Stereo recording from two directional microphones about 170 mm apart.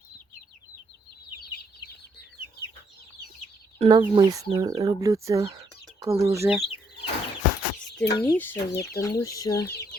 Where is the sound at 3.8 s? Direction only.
30° right (ahead or behind).